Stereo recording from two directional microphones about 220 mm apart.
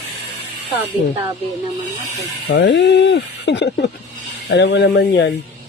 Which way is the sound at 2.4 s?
50° left (ahead or behind).